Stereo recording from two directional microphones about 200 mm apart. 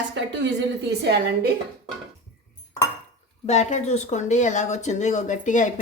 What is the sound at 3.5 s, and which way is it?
Speech, 35° left (ahead or behind).